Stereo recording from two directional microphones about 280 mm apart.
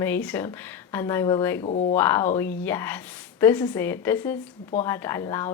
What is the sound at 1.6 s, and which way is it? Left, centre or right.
Speech, left.